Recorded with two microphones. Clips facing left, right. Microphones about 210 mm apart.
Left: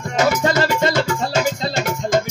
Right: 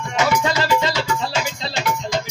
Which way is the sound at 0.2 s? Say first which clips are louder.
Left 3 dB; 45° left (ahead or behind).